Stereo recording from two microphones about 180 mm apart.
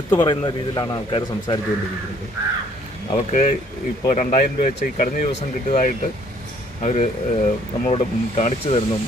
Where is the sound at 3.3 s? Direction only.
40° left (ahead or behind).